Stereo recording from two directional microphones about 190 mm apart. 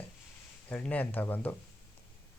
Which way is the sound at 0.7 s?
5° left (ahead or behind).